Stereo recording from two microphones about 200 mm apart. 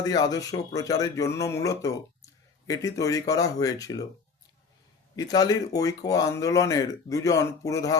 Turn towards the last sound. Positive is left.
turn(degrees=15)  # may be behind; listen again after turning